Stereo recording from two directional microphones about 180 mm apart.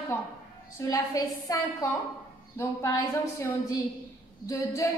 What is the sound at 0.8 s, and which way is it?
Speech, 20° left (ahead or behind).